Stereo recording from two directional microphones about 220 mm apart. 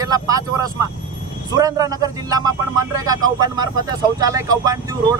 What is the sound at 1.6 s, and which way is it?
Speech, 15° right (ahead or behind).